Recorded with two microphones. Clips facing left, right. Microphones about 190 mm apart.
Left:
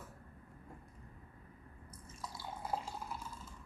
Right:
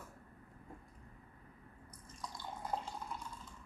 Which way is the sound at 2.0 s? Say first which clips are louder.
Even; 5° left (ahead or behind).